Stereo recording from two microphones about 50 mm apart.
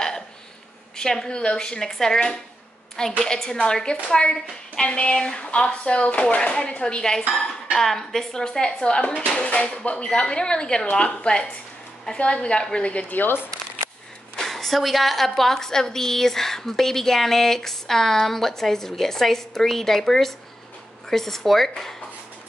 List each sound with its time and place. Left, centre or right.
0.9 s a woman's voice: centre
9.0 s a woman's voice: left
13.1 s speech: left
14.3 s a woman's voice: centre